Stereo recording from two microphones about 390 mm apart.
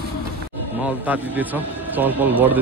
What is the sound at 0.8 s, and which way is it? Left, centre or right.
A man's voice, centre.